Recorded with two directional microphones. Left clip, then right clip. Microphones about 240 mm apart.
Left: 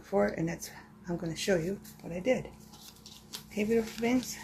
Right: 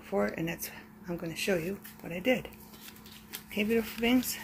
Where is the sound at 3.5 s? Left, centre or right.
Centre.